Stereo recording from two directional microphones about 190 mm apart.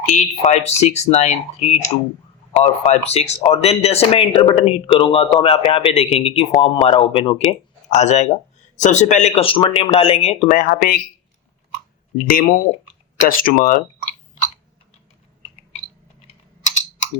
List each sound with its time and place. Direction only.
0.0 s speech: 40° left (ahead or behind)
10.5 s speech: 45° left (ahead or behind)
12.3 s speech: 45° left (ahead or behind)